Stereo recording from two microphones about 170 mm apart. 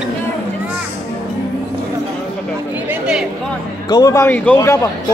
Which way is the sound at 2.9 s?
5° right (ahead or behind).